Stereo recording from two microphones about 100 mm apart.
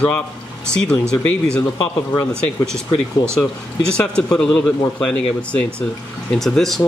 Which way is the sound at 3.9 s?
10° left (ahead or behind).